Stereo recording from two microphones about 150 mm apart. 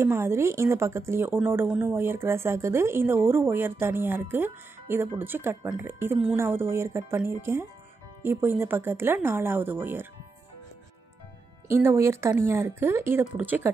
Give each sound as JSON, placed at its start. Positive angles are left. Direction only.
{"t": 0.0, "sound": "speech", "side_deg": -15}
{"t": 11.7, "sound": "speech", "side_deg": -15}